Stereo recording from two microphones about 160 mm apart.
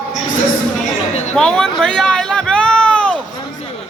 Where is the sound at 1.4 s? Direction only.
5° left (ahead or behind).